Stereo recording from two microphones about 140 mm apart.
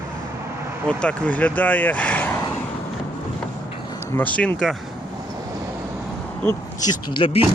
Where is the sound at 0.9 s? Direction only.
10° left (ahead or behind).